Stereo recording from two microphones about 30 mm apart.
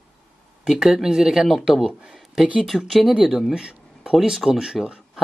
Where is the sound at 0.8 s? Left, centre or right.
Centre.